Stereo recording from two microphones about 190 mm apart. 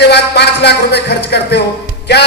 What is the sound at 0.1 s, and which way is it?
Music, 60° left (ahead or behind).